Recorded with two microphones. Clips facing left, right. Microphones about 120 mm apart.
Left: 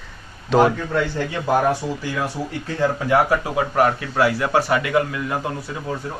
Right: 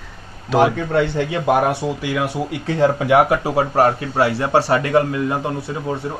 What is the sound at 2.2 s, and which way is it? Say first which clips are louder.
Speech: right 4 dB; 75° right (ahead or behind).